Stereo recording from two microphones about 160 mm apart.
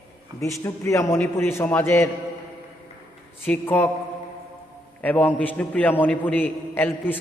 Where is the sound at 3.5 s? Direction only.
10° left (ahead or behind).